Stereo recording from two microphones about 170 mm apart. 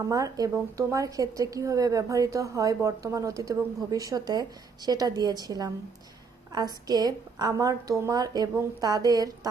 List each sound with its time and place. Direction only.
0.0 s a woman's voice: 20° right (ahead or behind)